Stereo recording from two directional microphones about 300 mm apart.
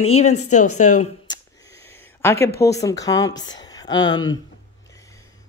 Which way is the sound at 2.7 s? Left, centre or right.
Centre.